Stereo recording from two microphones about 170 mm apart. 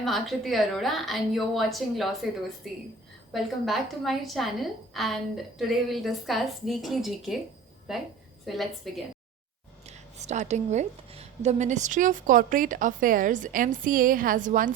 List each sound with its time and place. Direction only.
0.0 s a woman's voice: centre (ahead or behind)
9.8 s a woman's voice: 40° right (ahead or behind)